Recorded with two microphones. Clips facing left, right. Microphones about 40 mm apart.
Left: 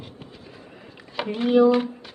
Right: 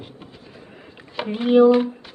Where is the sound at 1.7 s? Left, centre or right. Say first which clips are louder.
Right 4 dB; centre.